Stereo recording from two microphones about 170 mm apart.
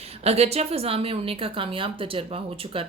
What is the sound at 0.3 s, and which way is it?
A woman's voice, 40° right (ahead or behind).